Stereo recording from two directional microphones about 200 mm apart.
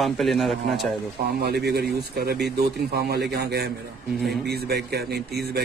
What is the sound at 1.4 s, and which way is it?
A man's voice, 55° right (ahead or behind).